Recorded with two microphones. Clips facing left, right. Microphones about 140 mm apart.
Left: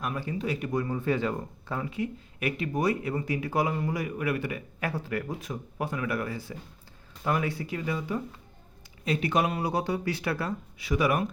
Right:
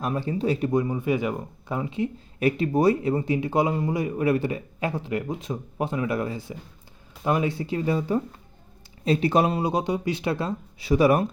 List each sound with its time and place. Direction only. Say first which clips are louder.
0.0 s speech: right 6 dB; 30° right (ahead or behind)